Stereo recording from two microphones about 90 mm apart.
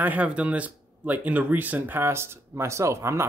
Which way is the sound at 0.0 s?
15° right (ahead or behind).